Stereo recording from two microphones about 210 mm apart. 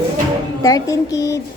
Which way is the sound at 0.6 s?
15° left (ahead or behind).